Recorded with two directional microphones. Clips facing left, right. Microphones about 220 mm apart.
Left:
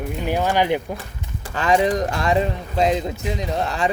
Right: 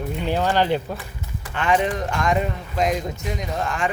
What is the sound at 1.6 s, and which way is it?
Speech, 35° left (ahead or behind).